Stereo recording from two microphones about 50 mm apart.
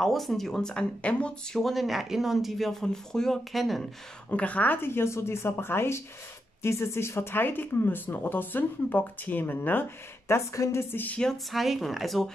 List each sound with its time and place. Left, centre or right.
0.0 s speech: centre
1.6 s speech: centre
3.5 s speech: centre
4.3 s a woman's voice: left
4.8 s a woman's voice: left
10.2 s a woman's voice: left
11.5 s speech: centre